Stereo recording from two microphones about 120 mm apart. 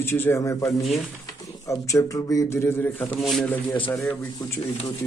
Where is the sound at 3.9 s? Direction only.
15° left (ahead or behind).